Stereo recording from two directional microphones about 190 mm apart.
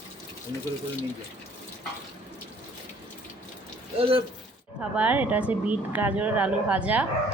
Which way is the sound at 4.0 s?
30° right (ahead or behind).